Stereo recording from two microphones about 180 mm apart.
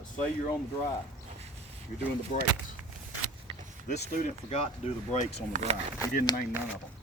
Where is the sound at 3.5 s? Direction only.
25° right (ahead or behind).